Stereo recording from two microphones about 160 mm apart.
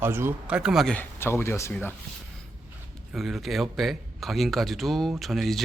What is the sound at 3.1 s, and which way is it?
Speech, centre (ahead or behind).